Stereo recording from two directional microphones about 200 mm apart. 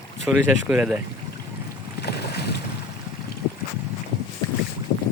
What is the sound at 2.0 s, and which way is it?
Boat, 55° left (ahead or behind).